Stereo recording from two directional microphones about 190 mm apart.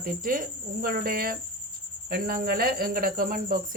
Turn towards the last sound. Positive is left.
turn(degrees=-50)  # may be behind; listen again after turning